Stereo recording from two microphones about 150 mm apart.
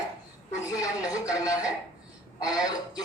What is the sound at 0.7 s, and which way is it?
Speech, 25° left (ahead or behind).